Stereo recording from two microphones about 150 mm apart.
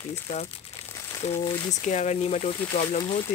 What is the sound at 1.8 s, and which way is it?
Speech, 50° left (ahead or behind).